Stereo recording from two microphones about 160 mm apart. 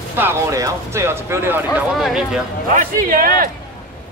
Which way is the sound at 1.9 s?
Centre (ahead or behind).